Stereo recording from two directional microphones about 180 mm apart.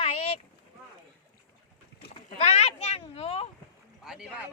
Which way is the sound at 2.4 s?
35° left (ahead or behind).